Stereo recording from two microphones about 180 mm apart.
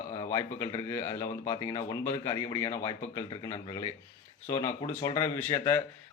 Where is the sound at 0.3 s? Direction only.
15° left (ahead or behind).